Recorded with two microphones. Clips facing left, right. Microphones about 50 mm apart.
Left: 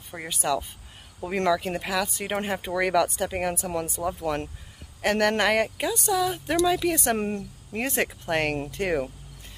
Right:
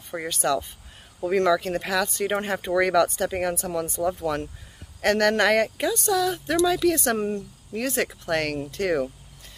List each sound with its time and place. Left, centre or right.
0.3 s speech: centre
1.8 s speech: centre; by 9.1 s left